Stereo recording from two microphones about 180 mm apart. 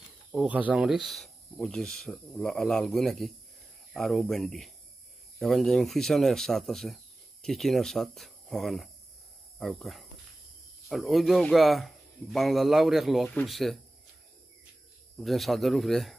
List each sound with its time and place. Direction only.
0.3 s speech: 5° right (ahead or behind)
15.1 s speech: centre (ahead or behind)